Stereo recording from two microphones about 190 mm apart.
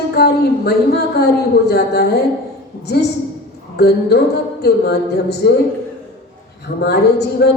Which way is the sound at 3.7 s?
55° left (ahead or behind).